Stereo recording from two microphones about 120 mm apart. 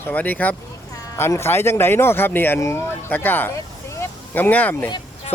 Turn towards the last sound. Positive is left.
turn(degrees=15)  # may be behind; listen again after turning